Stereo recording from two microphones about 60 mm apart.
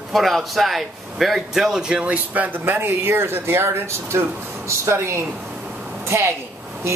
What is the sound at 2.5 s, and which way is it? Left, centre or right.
A woman's voice, right.